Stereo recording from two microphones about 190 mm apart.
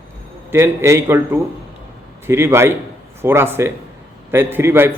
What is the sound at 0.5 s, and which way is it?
A man's voice, 15° right (ahead or behind).